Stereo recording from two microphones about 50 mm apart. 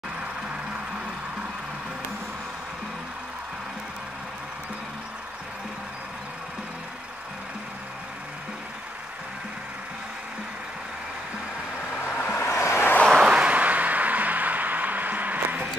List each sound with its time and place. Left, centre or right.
12.1 s vehicle: left
12.4 s vehicle: left
13.1 s a sound: centre